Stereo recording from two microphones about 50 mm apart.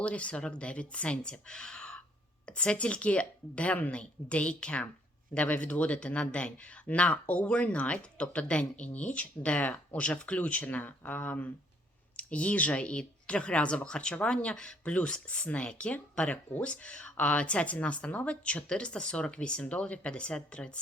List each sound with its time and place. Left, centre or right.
0.0 s speech: left
14.9 s speech: left